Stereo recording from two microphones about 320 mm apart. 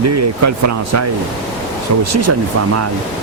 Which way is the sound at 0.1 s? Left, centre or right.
Right.